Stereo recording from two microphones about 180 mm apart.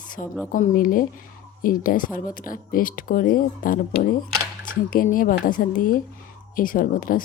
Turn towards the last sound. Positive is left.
turn(degrees=50)  # may be behind; listen again after turning